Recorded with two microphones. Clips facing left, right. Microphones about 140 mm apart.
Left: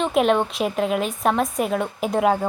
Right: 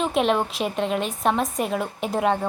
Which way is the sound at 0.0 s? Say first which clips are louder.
Left 3 dB; centre (ahead or behind).